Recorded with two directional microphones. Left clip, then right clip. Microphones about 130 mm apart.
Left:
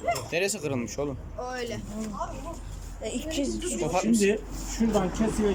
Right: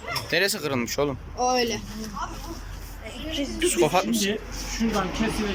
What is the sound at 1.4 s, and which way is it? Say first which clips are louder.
Speech: right 11 dB; 90° right.